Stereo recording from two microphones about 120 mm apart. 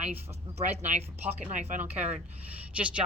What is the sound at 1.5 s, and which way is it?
Speech, 90° right.